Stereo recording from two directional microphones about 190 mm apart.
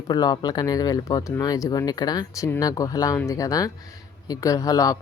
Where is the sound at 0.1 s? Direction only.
20° left (ahead or behind).